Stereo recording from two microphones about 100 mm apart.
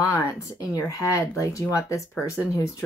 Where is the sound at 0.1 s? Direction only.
30° left (ahead or behind).